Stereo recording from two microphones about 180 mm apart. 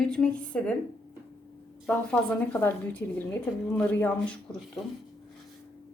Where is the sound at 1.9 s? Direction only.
5° left (ahead or behind).